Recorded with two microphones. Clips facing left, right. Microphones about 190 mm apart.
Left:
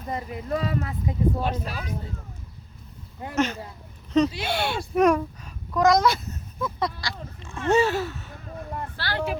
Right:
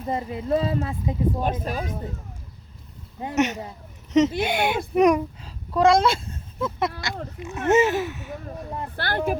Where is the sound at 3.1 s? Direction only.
20° right (ahead or behind).